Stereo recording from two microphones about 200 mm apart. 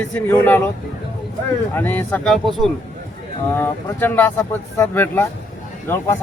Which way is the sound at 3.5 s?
10° left (ahead or behind).